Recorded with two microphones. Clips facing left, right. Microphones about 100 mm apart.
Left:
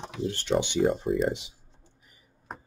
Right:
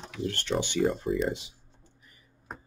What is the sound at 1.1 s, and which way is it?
Speech, 55° left (ahead or behind).